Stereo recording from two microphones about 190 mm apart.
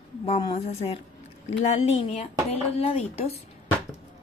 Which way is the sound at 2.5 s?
30° left (ahead or behind).